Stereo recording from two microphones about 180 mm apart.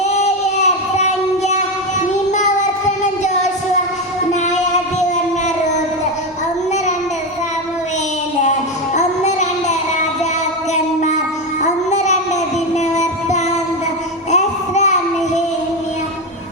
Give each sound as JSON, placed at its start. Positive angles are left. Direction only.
{"t": 2.3, "sound": "child singing", "side_deg": 40}
{"t": 9.0, "sound": "child singing", "side_deg": 40}
{"t": 11.6, "sound": "music", "side_deg": 40}
{"t": 14.3, "sound": "child singing", "side_deg": 40}